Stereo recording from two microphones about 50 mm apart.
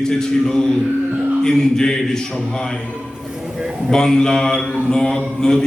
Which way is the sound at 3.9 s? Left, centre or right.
Centre.